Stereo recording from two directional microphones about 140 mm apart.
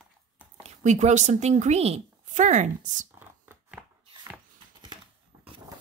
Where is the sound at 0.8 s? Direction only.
55° right (ahead or behind).